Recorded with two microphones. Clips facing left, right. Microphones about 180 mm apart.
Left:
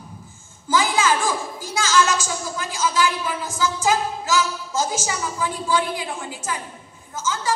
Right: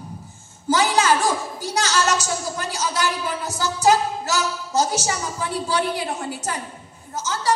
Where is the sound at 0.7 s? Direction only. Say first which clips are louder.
Right 2 dB; 40° right (ahead or behind).